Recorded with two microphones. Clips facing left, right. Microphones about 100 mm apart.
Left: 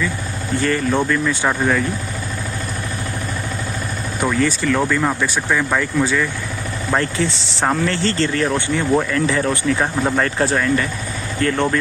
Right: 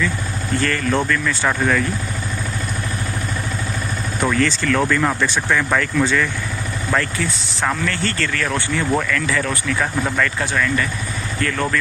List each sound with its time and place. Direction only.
0.6 s speech: 20° left (ahead or behind)
4.3 s speech: 15° left (ahead or behind)
6.9 s speech: 30° left (ahead or behind)